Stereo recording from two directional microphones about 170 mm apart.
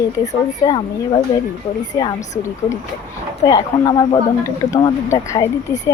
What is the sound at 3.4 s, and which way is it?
A woman's voice, 20° left (ahead or behind).